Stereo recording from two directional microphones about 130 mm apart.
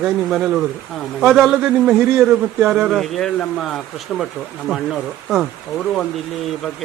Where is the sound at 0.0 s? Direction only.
5° right (ahead or behind).